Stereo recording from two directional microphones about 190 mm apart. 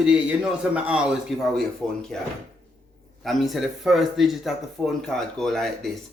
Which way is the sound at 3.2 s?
Centre (ahead or behind).